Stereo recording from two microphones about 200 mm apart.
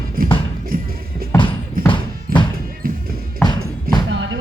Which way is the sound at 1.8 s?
45° right (ahead or behind).